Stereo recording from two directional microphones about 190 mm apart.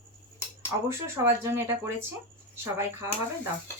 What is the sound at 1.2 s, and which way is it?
Speech, 15° right (ahead or behind).